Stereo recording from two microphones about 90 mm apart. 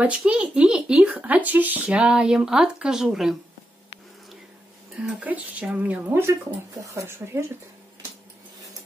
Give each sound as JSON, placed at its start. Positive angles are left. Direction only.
{"t": 0.0, "sound": "speech", "side_deg": -10}
{"t": 4.9, "sound": "speech", "side_deg": -15}
{"t": 6.9, "sound": "speech", "side_deg": -30}